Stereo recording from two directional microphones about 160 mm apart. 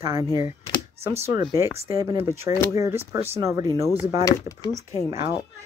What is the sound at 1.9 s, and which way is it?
Speech, 20° right (ahead or behind).